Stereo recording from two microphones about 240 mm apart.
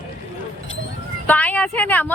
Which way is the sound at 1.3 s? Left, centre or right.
Centre.